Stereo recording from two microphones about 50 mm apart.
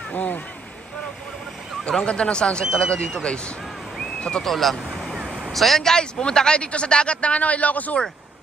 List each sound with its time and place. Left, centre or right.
0.1 s speech: left
1.9 s speech: centre
4.5 s speech: centre
5.1 s a sound: centre
5.5 s speech: centre; by 8.0 s left